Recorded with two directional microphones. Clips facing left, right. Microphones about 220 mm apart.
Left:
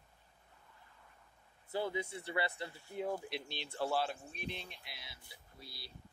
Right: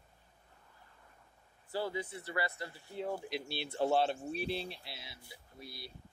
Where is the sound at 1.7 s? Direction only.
20° left (ahead or behind).